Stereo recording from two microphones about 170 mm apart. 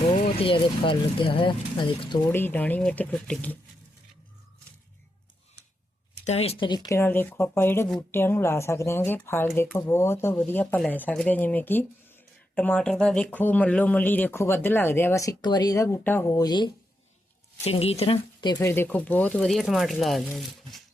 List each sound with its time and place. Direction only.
0.0 s speech: 35° left (ahead or behind)
2.3 s speech: 10° left (ahead or behind)
6.2 s speech: 35° left (ahead or behind)
17.6 s speech: 35° left (ahead or behind)
18.6 s speech: 15° left (ahead or behind)